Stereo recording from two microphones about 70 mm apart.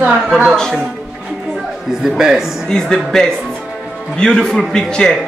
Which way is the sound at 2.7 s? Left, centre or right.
Centre.